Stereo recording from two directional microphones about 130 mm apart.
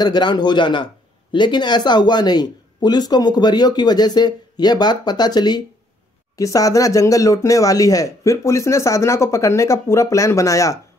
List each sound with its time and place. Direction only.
0.0 s speech: 35° left (ahead or behind)